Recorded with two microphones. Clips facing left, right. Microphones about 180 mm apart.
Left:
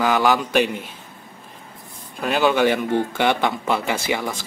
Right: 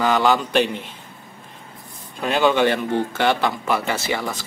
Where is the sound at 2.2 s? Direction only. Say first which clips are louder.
Even; 5° left (ahead or behind).